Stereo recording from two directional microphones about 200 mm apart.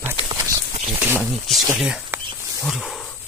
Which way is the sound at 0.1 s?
25° right (ahead or behind).